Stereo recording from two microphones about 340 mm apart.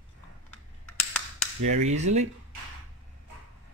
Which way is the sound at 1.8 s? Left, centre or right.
Centre.